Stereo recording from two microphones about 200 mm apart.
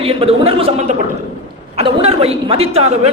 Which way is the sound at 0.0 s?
30° right (ahead or behind).